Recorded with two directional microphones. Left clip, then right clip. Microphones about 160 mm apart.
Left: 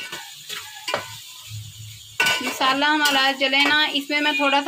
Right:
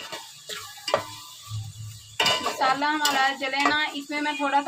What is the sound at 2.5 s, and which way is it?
A woman's voice, 50° left (ahead or behind).